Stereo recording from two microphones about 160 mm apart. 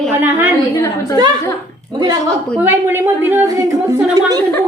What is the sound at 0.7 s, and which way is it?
Speech, 20° left (ahead or behind).